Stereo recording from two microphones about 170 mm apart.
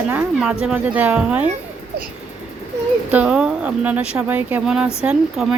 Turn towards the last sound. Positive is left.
turn(degrees=-5)  # may be behind; listen again after turning